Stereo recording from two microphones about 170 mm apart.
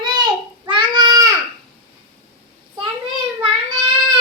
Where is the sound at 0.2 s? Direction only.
30° right (ahead or behind).